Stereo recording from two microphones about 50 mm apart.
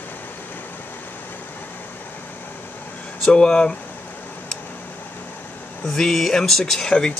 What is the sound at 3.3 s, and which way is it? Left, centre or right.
Speech, centre.